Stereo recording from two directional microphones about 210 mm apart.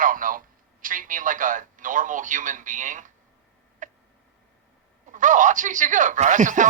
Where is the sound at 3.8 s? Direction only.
40° right (ahead or behind).